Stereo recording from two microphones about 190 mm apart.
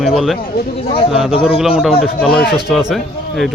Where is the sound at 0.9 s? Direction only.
30° left (ahead or behind).